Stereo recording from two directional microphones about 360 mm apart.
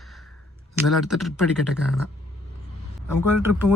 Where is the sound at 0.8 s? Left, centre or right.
Centre.